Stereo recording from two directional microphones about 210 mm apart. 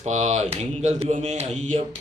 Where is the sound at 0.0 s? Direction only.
35° right (ahead or behind).